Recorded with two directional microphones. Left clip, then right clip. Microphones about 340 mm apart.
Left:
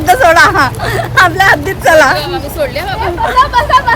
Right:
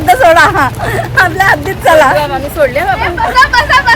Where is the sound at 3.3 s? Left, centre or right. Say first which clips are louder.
Right 1 dB; centre.